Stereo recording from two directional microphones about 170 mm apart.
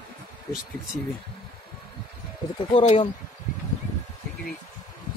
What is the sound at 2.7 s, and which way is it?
Speech, 35° left (ahead or behind).